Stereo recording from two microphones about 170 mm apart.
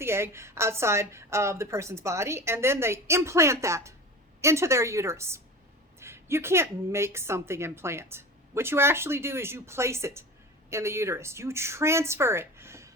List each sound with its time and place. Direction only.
0.0 s a woman's voice: 15° right (ahead or behind)